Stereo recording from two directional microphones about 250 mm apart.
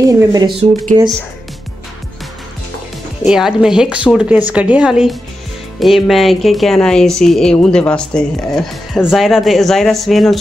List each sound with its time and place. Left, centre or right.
0.0 s speech: centre
3.3 s speech: centre